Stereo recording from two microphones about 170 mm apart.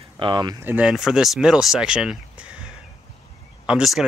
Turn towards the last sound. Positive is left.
turn(degrees=-5)  # may be behind; listen again after turning